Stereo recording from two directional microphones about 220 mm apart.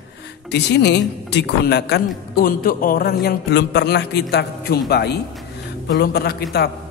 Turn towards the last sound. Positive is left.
turn(degrees=45)  # may be behind; listen again after turning